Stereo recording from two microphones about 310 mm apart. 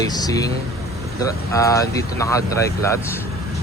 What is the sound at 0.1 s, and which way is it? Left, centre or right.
Speech, centre.